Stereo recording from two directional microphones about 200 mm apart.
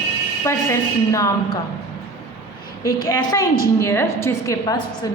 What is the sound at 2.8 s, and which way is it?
A woman's voice, 20° left (ahead or behind).